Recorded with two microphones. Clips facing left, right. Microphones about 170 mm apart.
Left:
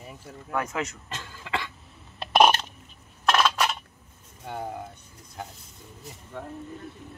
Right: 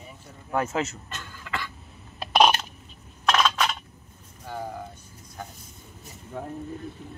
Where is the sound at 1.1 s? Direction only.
25° left (ahead or behind).